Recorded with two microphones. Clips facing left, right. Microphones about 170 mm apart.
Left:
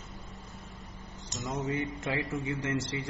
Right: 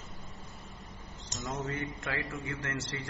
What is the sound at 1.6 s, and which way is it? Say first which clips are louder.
A man's voice: left 4 dB; 20° left (ahead or behind).